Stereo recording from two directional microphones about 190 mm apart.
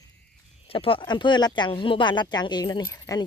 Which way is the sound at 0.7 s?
30° left (ahead or behind).